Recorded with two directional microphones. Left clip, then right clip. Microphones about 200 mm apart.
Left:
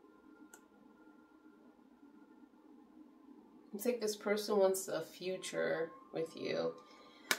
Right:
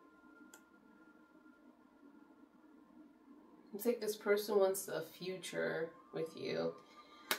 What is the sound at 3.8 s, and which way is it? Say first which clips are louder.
Speech: left 1 dB; 40° left (ahead or behind).